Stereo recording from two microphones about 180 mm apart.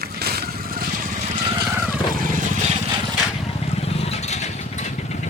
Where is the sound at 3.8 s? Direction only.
35° left (ahead or behind).